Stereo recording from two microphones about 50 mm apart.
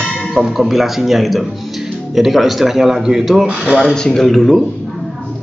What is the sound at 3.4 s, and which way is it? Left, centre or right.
Speech, right.